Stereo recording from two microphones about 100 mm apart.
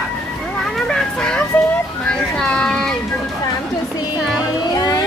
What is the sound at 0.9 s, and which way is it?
Vehicle, 5° left (ahead or behind).